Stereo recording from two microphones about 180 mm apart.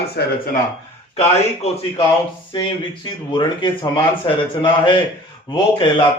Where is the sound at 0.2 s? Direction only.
65° left (ahead or behind).